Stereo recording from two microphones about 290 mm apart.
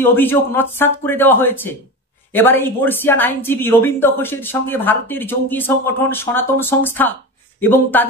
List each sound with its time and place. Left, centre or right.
0.0 s speech: centre